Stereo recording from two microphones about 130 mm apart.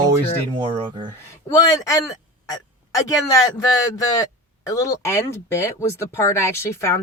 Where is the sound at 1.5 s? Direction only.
25° left (ahead or behind).